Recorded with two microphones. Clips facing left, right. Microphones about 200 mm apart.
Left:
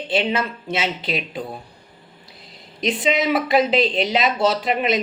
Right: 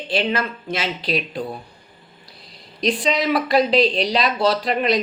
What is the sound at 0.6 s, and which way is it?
Speech, 25° left (ahead or behind).